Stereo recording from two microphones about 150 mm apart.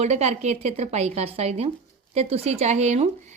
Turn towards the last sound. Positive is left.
turn(degrees=-50)  # may be behind; listen again after turning